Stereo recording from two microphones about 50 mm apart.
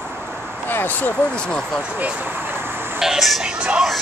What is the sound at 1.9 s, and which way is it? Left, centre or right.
Vehicle, right.